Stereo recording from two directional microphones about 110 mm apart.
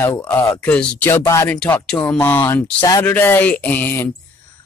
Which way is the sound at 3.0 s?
20° left (ahead or behind).